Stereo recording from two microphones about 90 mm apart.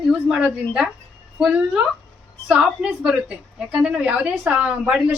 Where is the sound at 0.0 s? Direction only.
10° right (ahead or behind).